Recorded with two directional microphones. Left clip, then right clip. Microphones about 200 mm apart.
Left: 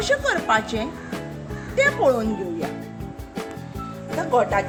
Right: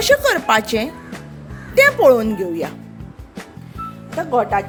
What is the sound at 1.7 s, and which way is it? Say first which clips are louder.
Speech: right 8 dB; 45° right (ahead or behind).